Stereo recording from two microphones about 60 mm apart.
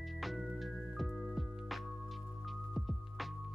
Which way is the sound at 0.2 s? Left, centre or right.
Centre.